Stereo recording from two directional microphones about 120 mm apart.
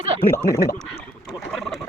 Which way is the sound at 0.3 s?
20° left (ahead or behind).